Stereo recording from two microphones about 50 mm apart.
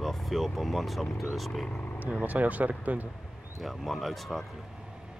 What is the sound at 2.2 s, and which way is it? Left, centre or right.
Speech, right.